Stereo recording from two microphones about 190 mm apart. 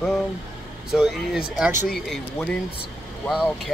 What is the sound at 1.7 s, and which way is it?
Speech, 40° left (ahead or behind).